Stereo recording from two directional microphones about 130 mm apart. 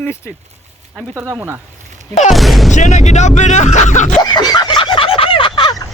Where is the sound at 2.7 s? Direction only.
65° left (ahead or behind).